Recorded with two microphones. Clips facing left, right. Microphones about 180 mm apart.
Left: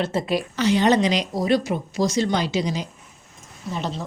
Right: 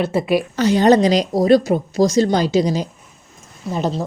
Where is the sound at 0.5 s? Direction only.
40° right (ahead or behind).